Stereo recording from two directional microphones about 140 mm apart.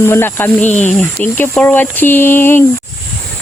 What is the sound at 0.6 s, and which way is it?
Speech, 55° left (ahead or behind).